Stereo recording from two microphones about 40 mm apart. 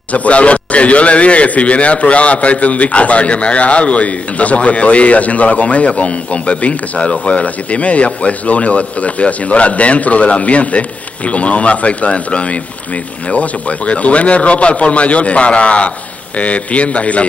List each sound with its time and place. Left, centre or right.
0.1 s a man's voice: left